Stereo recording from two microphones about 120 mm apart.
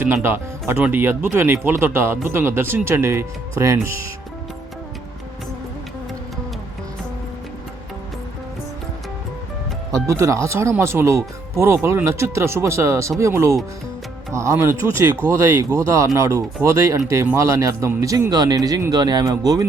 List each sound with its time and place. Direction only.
0.0 s speech: 20° right (ahead or behind)
9.9 s speech: 25° right (ahead or behind)